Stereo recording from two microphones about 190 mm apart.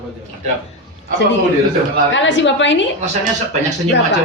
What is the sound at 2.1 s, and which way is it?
Speech, 70° left (ahead or behind).